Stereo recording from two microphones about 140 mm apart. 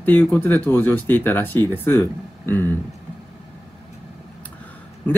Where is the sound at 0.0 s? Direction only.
15° left (ahead or behind).